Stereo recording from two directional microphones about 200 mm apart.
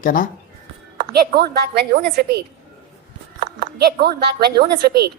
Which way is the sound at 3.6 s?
50° right (ahead or behind).